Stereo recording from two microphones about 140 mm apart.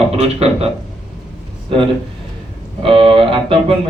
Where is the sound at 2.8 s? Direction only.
40° right (ahead or behind).